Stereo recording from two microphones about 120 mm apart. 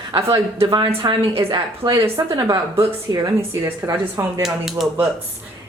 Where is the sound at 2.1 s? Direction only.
30° right (ahead or behind).